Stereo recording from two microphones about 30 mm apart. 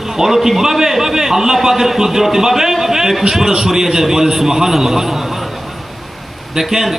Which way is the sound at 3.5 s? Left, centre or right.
Centre.